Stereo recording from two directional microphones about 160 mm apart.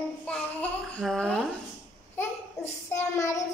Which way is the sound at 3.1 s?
20° left (ahead or behind).